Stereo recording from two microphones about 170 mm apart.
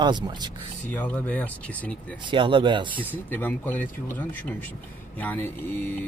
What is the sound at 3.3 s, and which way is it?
Speech, 10° left (ahead or behind).